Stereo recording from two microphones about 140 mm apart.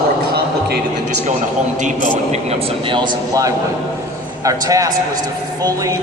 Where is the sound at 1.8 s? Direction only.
60° right (ahead or behind).